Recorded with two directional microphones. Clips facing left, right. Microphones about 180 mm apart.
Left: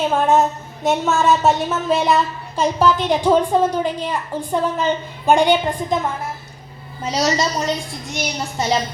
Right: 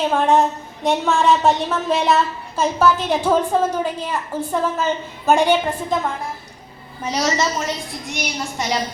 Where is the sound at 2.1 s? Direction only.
15° left (ahead or behind).